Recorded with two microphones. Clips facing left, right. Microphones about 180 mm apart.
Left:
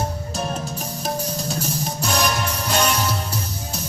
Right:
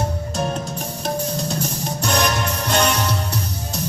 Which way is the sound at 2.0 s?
10° left (ahead or behind).